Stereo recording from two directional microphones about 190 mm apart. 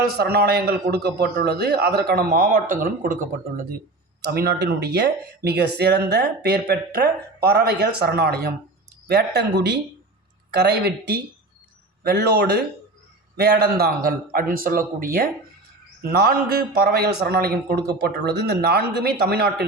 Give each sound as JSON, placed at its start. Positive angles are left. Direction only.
{"t": 0.1, "sound": "a man's voice", "side_deg": -55}